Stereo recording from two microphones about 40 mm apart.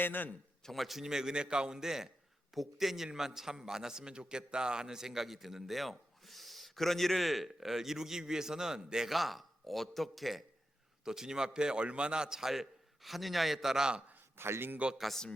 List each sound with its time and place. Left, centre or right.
0.0 s a man's voice: left
0.7 s a man's voice: centre
9.0 s a man's voice: centre
11.0 s a man's voice: centre
14.3 s a man's voice: right